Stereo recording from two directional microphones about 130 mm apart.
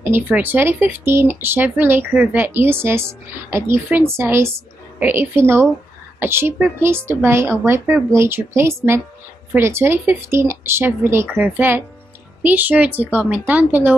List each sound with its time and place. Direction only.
0.0 s a woman's voice: 15° right (ahead or behind)